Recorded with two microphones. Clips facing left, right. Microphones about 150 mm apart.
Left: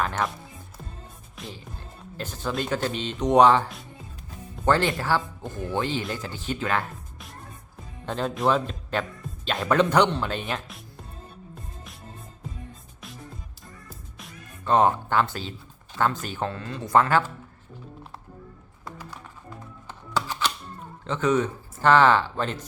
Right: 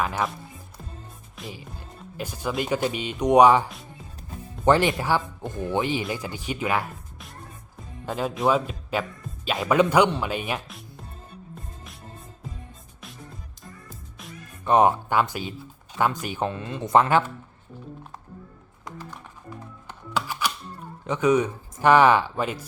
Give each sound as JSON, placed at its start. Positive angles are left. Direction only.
{"t": 0.0, "sound": "speech", "side_deg": -5}
{"t": 1.4, "sound": "music", "side_deg": -5}
{"t": 2.1, "sound": "speech", "side_deg": -10}
{"t": 8.0, "sound": "speech", "side_deg": -5}
{"t": 14.6, "sound": "speech", "side_deg": -15}
{"t": 19.9, "sound": "music", "side_deg": -10}
{"t": 21.0, "sound": "speech", "side_deg": -15}